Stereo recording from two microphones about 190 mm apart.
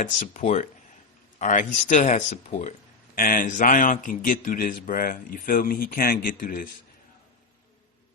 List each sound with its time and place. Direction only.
0.0 s a man's voice: 40° left (ahead or behind)